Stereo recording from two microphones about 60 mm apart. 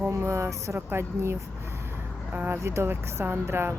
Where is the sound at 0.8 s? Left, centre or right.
Right.